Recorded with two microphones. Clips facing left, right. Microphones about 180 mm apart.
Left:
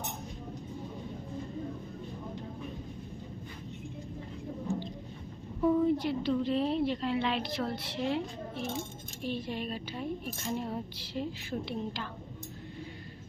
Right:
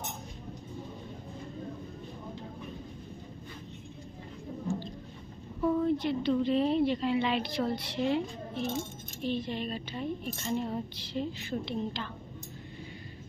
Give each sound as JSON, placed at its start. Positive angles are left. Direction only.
{"t": 5.6, "sound": "a woman's voice", "side_deg": 10}